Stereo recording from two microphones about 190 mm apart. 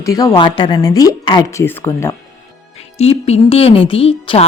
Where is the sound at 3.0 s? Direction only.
35° left (ahead or behind).